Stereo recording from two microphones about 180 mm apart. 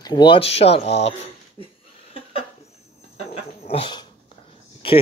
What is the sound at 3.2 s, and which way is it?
Dog, 35° left (ahead or behind).